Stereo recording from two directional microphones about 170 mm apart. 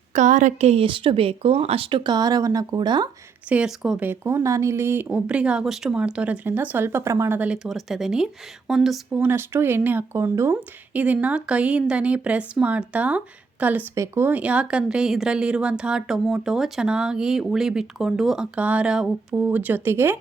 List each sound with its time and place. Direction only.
0.2 s speech: 45° right (ahead or behind); by 3.1 s 25° right (ahead or behind)
3.5 s speech: 5° right (ahead or behind)
9.1 s speech: 15° right (ahead or behind)